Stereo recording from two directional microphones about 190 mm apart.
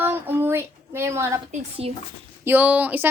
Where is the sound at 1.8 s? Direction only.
30° right (ahead or behind).